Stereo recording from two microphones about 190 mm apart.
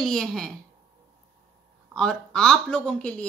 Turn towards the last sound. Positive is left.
turn(degrees=5)  # may be behind; listen again after turning